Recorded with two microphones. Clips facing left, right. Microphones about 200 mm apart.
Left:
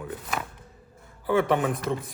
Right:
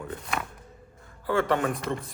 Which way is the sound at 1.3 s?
15° left (ahead or behind).